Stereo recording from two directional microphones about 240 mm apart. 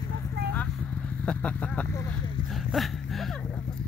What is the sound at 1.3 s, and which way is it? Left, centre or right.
Vehicle, centre.